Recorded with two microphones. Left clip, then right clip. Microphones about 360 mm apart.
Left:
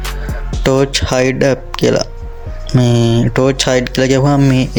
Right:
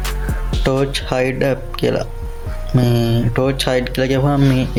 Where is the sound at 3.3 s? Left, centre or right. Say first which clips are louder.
Left 4 dB; right.